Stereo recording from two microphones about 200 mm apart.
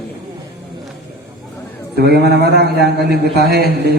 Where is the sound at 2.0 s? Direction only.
55° right (ahead or behind).